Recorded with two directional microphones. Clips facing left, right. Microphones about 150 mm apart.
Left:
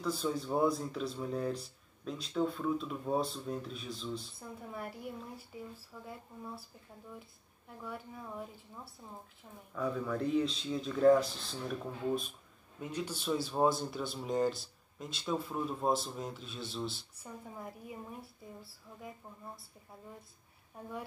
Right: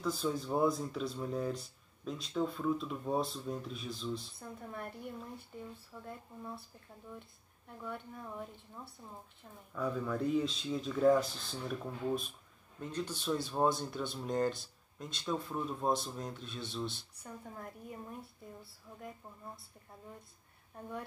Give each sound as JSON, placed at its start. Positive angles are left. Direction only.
{"t": 0.0, "sound": "speech", "side_deg": 0}